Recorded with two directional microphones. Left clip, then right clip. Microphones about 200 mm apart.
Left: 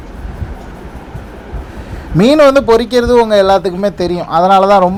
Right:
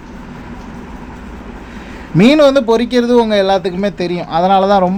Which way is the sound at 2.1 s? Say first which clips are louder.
Left 2 dB; centre (ahead or behind).